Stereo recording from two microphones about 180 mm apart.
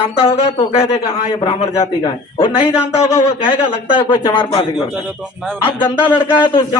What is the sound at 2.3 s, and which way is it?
A man's voice, 30° left (ahead or behind).